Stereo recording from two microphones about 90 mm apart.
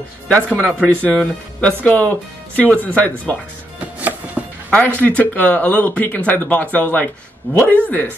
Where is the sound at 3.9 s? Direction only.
15° right (ahead or behind).